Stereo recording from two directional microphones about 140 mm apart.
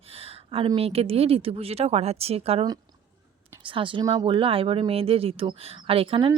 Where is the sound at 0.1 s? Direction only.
45° right (ahead or behind).